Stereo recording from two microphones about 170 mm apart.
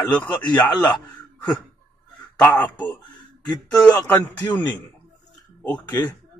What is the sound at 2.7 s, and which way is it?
Speech, 25° left (ahead or behind).